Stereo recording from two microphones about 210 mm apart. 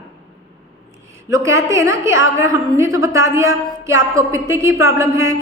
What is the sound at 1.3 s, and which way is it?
A woman's voice, 15° right (ahead or behind).